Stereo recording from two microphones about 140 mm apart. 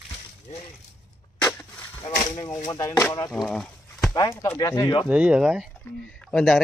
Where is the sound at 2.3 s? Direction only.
25° left (ahead or behind).